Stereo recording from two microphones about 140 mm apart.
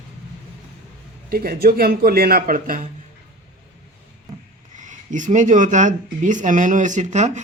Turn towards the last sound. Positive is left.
turn(degrees=-55)  # may be behind; listen again after turning